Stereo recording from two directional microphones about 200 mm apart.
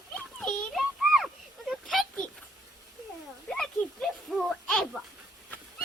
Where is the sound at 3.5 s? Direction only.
5° left (ahead or behind).